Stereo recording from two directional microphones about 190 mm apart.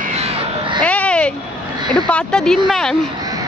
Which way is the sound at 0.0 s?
35° right (ahead or behind).